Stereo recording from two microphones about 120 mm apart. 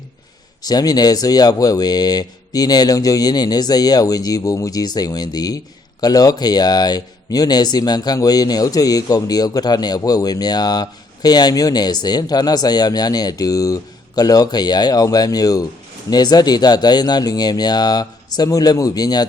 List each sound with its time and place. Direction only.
0.6 s speech: 30° left (ahead or behind)